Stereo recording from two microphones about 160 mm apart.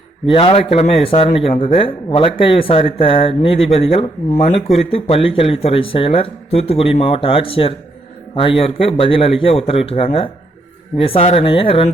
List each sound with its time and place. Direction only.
0.3 s speech: 35° left (ahead or behind)